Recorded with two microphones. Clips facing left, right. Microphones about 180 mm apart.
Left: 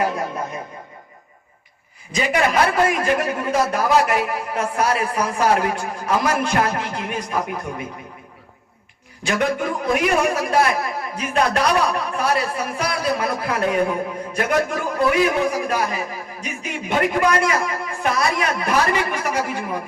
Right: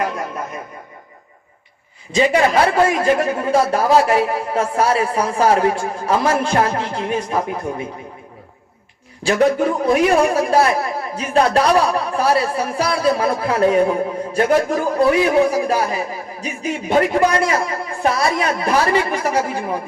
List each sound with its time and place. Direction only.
0.0 s speech: centre (ahead or behind)
2.1 s a man's voice: 30° right (ahead or behind)
9.2 s a man's voice: 35° right (ahead or behind)